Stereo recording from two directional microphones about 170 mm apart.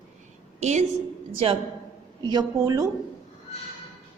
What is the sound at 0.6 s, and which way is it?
Speech, 40° right (ahead or behind).